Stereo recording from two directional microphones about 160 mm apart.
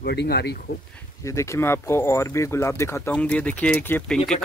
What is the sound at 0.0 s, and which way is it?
Speech, 90° left.